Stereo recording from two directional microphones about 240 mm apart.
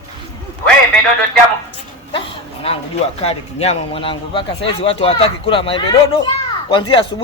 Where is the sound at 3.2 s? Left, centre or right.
Left.